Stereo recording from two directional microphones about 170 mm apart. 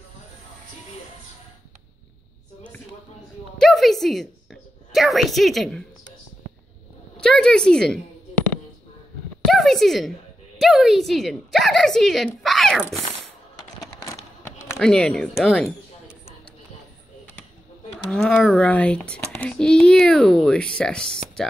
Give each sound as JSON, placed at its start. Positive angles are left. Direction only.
{"t": 3.5, "sound": "a sound", "side_deg": 0}
{"t": 7.2, "sound": "a child's voice", "side_deg": 5}
{"t": 9.5, "sound": "a child's voice", "side_deg": 0}
{"t": 13.7, "sound": "a sound", "side_deg": 15}
{"t": 14.8, "sound": "a child's voice", "side_deg": 5}
{"t": 18.1, "sound": "a child's voice", "side_deg": 5}